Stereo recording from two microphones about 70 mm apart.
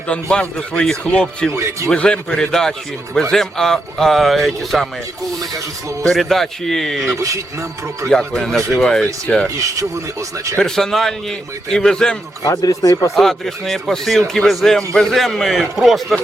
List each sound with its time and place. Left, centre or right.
0.1 s a man's voice: centre
1.5 s speech: right
1.9 s a man's voice: centre
6.0 s speech: centre
7.2 s speech: right
8.1 s a man's voice: centre
9.6 s speech: right
10.6 s a man's voice: centre
12.5 s speech: left
13.1 s speech: centre